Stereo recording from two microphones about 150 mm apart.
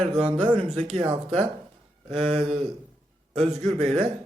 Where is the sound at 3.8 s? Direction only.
35° right (ahead or behind).